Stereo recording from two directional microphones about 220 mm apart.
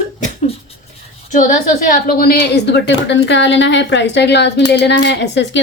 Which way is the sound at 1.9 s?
40° left (ahead or behind).